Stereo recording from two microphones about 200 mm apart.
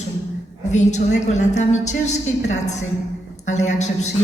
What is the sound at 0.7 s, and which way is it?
A woman's voice, 35° left (ahead or behind).